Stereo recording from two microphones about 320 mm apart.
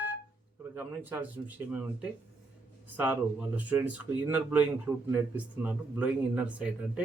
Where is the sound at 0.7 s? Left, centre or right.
Centre.